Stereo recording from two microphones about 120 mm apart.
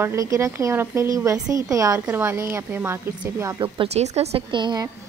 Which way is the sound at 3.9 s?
65° right (ahead or behind).